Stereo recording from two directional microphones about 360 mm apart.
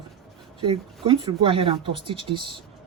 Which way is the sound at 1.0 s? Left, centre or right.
Centre.